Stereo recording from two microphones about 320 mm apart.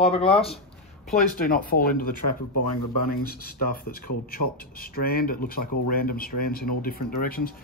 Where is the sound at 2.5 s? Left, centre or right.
Left.